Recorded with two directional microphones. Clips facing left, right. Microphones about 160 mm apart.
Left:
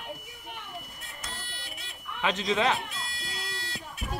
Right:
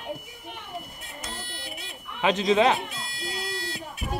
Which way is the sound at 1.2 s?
20° right (ahead or behind).